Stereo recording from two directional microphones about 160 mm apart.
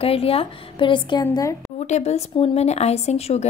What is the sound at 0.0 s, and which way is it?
Speech, 35° left (ahead or behind).